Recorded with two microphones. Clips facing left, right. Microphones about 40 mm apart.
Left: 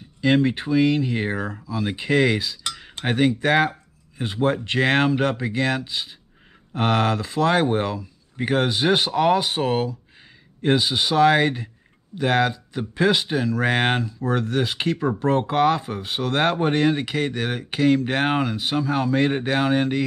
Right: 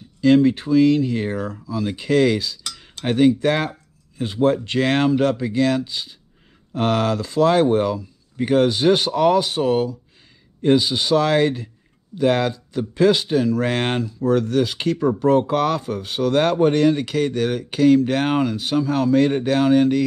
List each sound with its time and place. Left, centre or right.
0.2 s speech: left